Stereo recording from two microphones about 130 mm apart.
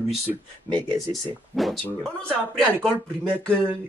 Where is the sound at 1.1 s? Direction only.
Centre (ahead or behind).